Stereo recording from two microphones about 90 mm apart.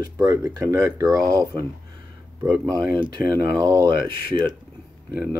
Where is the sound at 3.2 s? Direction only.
45° right (ahead or behind).